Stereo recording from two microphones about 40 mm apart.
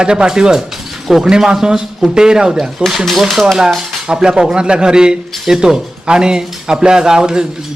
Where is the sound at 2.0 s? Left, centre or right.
Centre.